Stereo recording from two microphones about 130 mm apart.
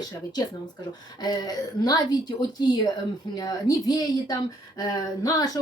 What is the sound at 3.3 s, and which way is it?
A woman's voice, 30° left (ahead or behind).